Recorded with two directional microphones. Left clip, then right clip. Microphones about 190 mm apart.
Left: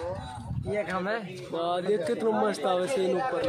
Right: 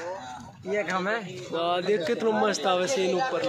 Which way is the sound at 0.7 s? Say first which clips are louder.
Right 3 dB; 40° right (ahead or behind).